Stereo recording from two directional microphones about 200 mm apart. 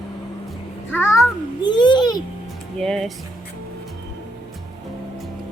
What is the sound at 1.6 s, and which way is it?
Speech, 20° left (ahead or behind).